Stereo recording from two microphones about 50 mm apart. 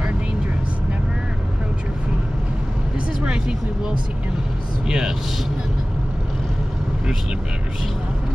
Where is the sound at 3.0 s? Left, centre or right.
Centre.